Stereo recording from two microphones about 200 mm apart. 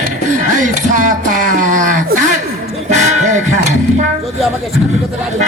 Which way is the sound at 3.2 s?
35° right (ahead or behind).